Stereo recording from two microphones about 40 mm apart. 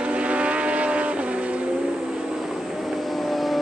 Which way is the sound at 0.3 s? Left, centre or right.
Right.